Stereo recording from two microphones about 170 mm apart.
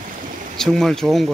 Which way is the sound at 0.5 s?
5° left (ahead or behind).